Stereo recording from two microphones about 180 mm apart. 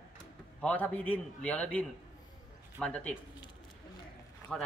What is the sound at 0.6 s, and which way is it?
A man's voice, 5° left (ahead or behind).